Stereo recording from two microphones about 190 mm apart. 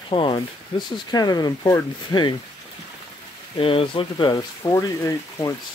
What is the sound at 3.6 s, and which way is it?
Speech, 30° left (ahead or behind).